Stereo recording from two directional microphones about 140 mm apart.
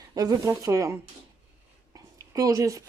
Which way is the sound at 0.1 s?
25° right (ahead or behind).